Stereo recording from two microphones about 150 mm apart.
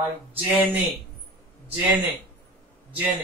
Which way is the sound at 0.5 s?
10° right (ahead or behind).